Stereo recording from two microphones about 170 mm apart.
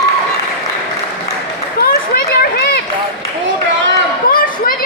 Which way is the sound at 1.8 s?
65° left (ahead or behind).